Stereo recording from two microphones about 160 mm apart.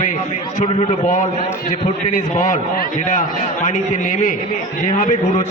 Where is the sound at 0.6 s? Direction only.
35° left (ahead or behind).